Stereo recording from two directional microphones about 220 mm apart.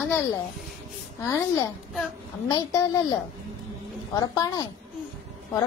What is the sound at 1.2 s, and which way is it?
A child's voice, 15° left (ahead or behind).